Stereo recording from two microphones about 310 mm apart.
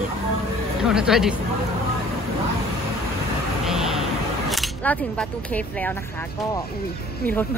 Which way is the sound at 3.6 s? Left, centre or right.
Centre.